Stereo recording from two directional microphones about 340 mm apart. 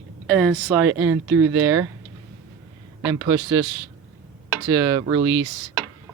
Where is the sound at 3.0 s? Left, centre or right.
Centre.